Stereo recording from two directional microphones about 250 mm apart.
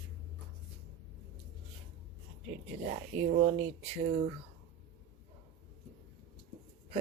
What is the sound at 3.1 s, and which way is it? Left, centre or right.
Speech, right.